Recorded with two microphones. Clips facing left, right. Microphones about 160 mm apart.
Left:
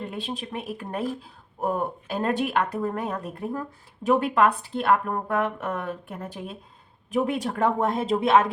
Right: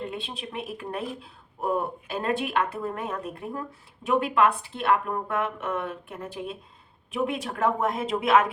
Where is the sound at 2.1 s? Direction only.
40° left (ahead or behind).